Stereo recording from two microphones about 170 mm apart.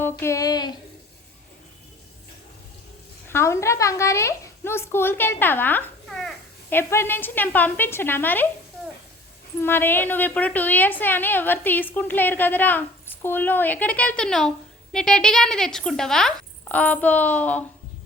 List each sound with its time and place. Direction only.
0.0 s a sound: 15° left (ahead or behind)
3.2 s a woman's voice: 15° left (ahead or behind)
6.7 s a woman's voice: 15° left (ahead or behind)
9.6 s a woman's voice: 10° left (ahead or behind)